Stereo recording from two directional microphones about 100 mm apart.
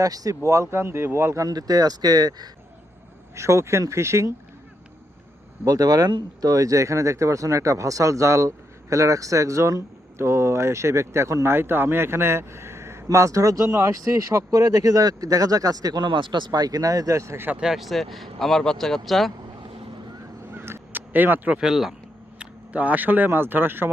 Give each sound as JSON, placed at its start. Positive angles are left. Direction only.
{"t": 0.0, "sound": "speech", "side_deg": -35}
{"t": 3.3, "sound": "speech", "side_deg": -30}
{"t": 5.6, "sound": "speech", "side_deg": -35}
{"t": 17.6, "sound": "speech", "side_deg": -5}
{"t": 20.5, "sound": "a sound", "side_deg": -25}
{"t": 22.4, "sound": "speech", "side_deg": -15}